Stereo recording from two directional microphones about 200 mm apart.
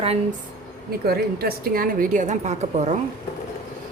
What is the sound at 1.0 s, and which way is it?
A woman's voice, 50° right (ahead or behind).